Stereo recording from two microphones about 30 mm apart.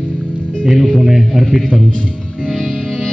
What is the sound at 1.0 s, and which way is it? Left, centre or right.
Speech, centre.